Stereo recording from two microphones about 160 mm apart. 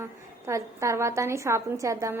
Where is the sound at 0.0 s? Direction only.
20° right (ahead or behind).